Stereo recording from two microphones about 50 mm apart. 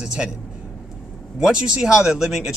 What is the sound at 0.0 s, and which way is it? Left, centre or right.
Speech, centre.